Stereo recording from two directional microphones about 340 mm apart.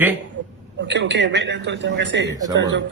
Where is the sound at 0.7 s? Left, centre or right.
Right.